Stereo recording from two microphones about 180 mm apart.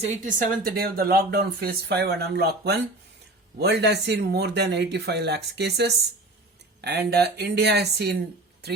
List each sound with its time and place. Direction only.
0.0 s speech: 50° right (ahead or behind); by 8.1 s 65° right (ahead or behind)